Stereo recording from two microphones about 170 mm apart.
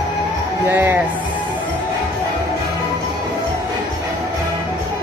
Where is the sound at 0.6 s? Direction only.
10° right (ahead or behind).